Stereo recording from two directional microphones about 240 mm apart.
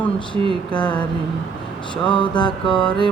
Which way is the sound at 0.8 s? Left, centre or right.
Centre.